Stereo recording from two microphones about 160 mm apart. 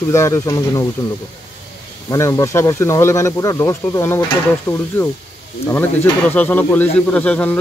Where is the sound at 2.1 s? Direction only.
20° left (ahead or behind).